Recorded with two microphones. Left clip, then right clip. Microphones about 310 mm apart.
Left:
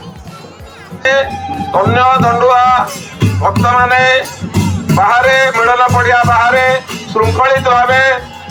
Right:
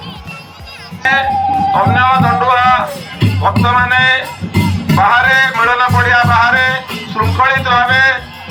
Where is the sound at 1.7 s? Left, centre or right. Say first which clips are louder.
Left 4 dB; left.